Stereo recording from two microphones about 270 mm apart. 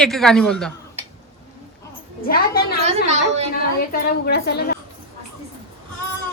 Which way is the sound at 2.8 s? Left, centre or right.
Right.